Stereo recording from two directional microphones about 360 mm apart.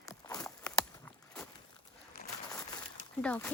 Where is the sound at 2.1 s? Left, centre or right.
Left.